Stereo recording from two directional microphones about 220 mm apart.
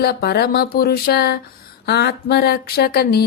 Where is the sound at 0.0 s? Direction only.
45° left (ahead or behind).